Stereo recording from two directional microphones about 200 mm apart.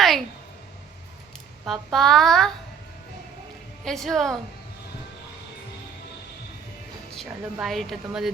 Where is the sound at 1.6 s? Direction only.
Centre (ahead or behind).